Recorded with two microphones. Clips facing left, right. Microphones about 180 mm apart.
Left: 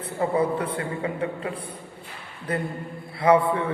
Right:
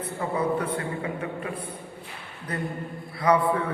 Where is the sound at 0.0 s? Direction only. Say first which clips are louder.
Left 4 dB; 30° left (ahead or behind).